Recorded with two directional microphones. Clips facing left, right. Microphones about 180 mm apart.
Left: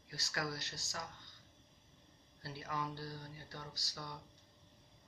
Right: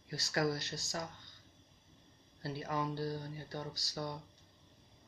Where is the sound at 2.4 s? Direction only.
35° right (ahead or behind).